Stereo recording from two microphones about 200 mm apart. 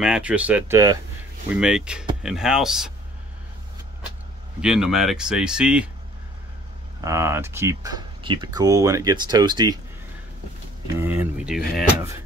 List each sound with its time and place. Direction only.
0.0 s speech: 5° right (ahead or behind)
1.5 s speech: 5° right (ahead or behind)
4.6 s speech: 5° right (ahead or behind)
7.0 s speech: 15° right (ahead or behind)
11.0 s speech: 10° right (ahead or behind)